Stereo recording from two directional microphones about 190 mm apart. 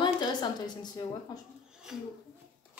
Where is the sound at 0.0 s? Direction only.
20° left (ahead or behind).